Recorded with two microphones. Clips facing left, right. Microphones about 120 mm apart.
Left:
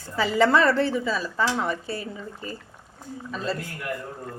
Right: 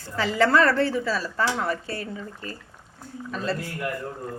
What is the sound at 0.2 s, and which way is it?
Speech, 5° left (ahead or behind).